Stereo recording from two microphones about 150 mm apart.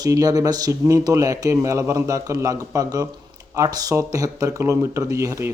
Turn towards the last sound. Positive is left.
turn(degrees=-20)  # may be behind; listen again after turning